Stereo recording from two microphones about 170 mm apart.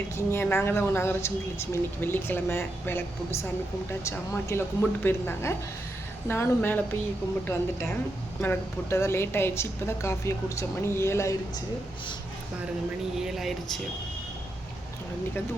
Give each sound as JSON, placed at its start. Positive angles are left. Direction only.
{"t": 0.2, "sound": "a woman's voice", "side_deg": 15}
{"t": 13.1, "sound": "speech", "side_deg": 0}